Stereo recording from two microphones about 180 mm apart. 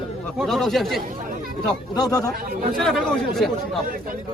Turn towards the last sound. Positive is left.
turn(degrees=0)  # may be behind; listen again after turning